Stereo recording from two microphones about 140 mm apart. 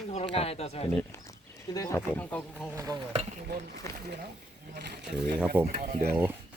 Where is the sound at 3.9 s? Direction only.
20° left (ahead or behind).